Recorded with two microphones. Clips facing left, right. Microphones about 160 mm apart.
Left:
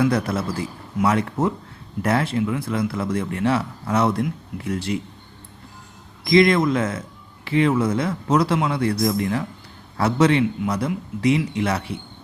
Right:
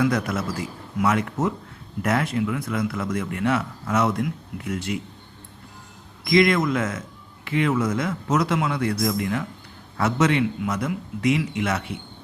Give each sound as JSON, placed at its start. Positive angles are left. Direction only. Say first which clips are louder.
{"t": 0.0, "sound": "a man's voice", "louder": "left 2 dB", "side_deg": 30}
{"t": 6.2, "sound": "a man's voice", "louder": "left 3 dB", "side_deg": 30}